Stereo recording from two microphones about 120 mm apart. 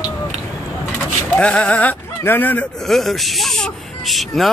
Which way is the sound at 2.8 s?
Centre (ahead or behind).